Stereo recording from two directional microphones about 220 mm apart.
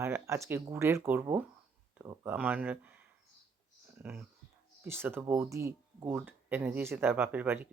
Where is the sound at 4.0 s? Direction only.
10° right (ahead or behind).